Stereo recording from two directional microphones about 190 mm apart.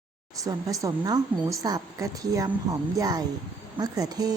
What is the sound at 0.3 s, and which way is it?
A woman's voice, 20° right (ahead or behind).